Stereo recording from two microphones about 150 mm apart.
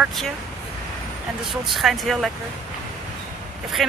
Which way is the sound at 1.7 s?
Centre (ahead or behind).